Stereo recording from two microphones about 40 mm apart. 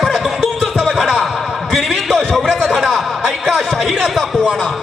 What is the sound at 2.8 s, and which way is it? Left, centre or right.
A man's voice, centre.